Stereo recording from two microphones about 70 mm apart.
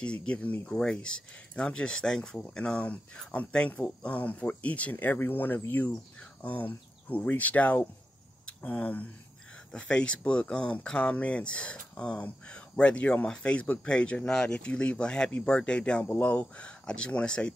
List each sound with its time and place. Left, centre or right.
0.0 s speech: centre
4.9 s speech: left
9.7 s speech: centre